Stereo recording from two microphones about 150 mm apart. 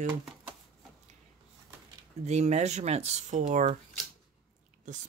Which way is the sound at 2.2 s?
50° right (ahead or behind).